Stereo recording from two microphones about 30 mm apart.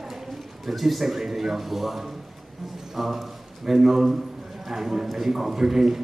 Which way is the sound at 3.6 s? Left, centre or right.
Centre.